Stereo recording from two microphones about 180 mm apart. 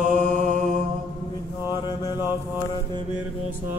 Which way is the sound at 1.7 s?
25° left (ahead or behind).